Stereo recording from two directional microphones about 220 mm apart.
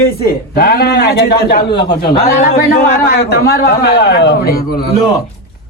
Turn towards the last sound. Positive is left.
turn(degrees=50)  # may be behind; listen again after turning